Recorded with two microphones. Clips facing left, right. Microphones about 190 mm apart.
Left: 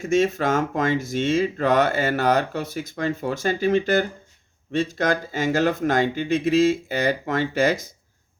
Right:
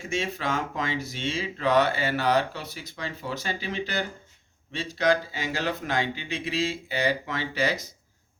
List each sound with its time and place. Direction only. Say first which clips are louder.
0.0 s speech: left 10 dB; 45° left (ahead or behind)